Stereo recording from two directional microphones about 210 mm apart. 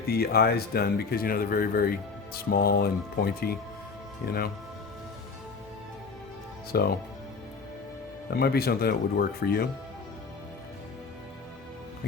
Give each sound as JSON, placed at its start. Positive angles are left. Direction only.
{"t": 0.1, "sound": "speech", "side_deg": 45}
{"t": 6.7, "sound": "speech", "side_deg": 45}
{"t": 8.3, "sound": "speech", "side_deg": 50}